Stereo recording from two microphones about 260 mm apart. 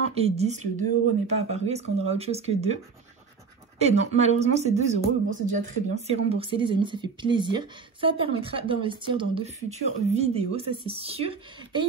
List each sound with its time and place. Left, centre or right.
0.1 s speech: right